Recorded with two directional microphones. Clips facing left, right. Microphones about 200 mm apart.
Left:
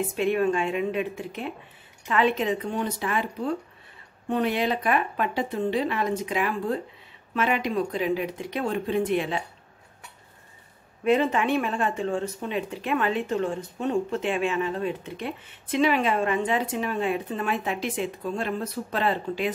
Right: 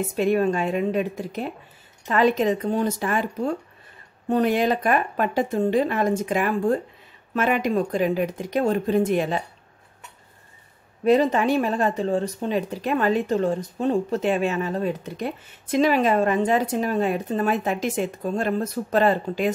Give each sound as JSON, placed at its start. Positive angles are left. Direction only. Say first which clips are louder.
{"t": 0.0, "sound": "speech", "louder": "right 3 dB", "side_deg": -40}
{"t": 11.1, "sound": "speech", "louder": "right 4 dB", "side_deg": -35}